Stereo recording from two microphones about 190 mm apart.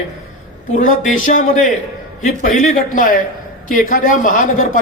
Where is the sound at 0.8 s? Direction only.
45° left (ahead or behind).